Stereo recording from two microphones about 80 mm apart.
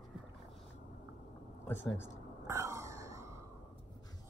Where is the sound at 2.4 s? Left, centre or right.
Right.